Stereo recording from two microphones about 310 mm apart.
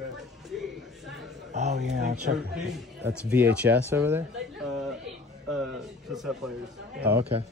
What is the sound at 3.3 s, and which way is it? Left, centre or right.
Speech, centre.